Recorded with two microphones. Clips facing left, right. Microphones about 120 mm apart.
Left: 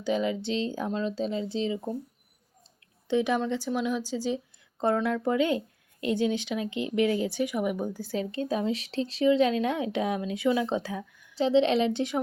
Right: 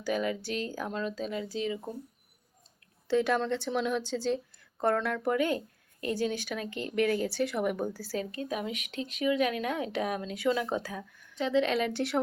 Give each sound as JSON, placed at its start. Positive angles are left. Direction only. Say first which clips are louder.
{"t": 0.0, "sound": "speech", "louder": "left 3 dB", "side_deg": 20}
{"t": 3.1, "sound": "speech", "louder": "left 1 dB", "side_deg": 15}
{"t": 11.3, "sound": "speech", "louder": "left 5 dB", "side_deg": 30}